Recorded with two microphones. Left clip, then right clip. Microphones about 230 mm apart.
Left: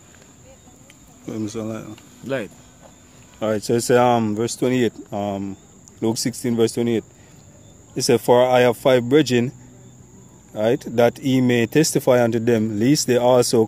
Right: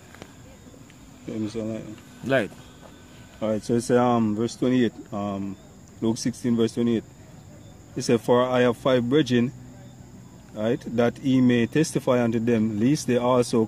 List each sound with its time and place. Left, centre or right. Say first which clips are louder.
1.2 s speech: left 3 dB; left
2.2 s speech: right 3 dB; centre
3.3 s speech: left 5 dB; left
10.5 s speech: left 6 dB; left